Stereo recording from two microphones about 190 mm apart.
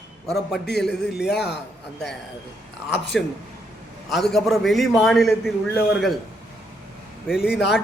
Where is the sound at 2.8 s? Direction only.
70° left (ahead or behind).